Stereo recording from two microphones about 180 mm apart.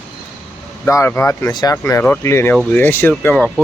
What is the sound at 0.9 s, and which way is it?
Speech, 15° left (ahead or behind).